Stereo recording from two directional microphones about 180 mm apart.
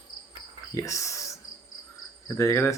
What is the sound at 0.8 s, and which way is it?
Speech, 15° left (ahead or behind).